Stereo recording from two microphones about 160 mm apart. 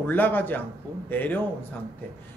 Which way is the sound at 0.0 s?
10° left (ahead or behind).